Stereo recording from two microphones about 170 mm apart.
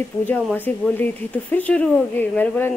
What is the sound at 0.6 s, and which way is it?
A woman's voice, 10° left (ahead or behind).